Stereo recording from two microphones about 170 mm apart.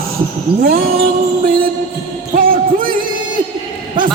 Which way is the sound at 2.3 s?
55° right (ahead or behind).